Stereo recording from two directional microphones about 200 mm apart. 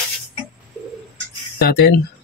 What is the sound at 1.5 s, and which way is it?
Speech, 50° left (ahead or behind).